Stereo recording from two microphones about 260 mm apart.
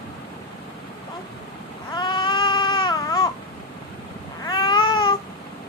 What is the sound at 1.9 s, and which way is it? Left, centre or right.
Baby cry, centre.